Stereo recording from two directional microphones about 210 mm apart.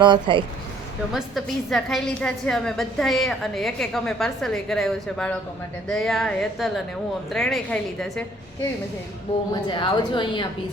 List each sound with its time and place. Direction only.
0.0 s speech: 20° right (ahead or behind)
1.1 s a woman's voice: centre (ahead or behind)
9.6 s speech: 20° left (ahead or behind)